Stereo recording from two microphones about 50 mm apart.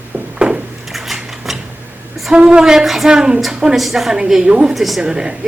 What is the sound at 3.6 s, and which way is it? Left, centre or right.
Speech, centre.